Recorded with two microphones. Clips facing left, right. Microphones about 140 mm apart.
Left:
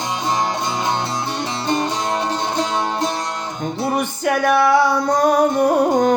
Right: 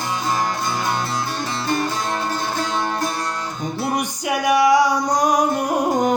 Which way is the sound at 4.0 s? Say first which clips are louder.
Left 4 dB; 10° right (ahead or behind).